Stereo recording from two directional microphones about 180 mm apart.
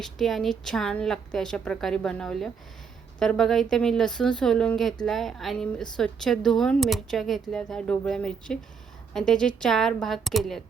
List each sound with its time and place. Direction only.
0.0 s speech: centre (ahead or behind)